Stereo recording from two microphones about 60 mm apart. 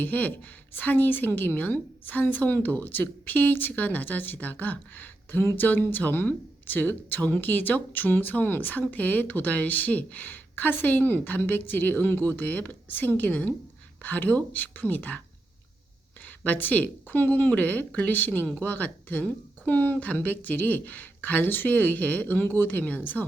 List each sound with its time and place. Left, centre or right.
0.0 s a woman's voice: left
16.2 s a woman's voice: left